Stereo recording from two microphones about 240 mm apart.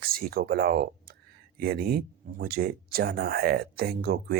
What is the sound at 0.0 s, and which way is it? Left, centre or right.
Speech, right.